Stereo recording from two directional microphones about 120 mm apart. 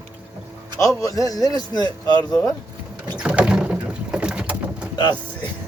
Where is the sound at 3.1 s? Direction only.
10° right (ahead or behind).